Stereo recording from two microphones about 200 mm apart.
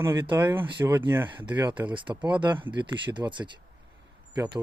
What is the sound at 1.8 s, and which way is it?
Speech, 25° right (ahead or behind).